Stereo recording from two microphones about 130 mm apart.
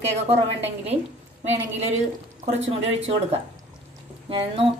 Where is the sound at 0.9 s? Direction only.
50° right (ahead or behind).